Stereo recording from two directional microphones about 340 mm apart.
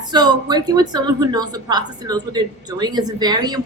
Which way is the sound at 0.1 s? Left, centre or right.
Centre.